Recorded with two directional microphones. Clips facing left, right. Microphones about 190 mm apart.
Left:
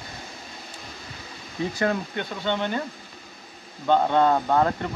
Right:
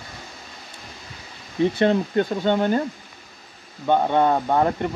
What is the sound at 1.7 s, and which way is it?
Speech, 25° right (ahead or behind).